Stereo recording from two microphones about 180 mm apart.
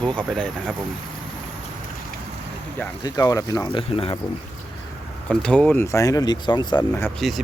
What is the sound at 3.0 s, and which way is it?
Speech, 20° left (ahead or behind).